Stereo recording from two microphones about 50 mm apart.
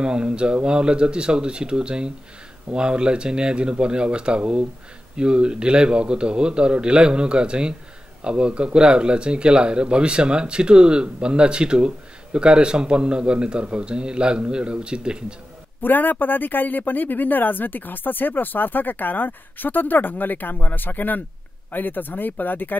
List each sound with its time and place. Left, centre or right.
0.0 s speech: centre
15.8 s speech: left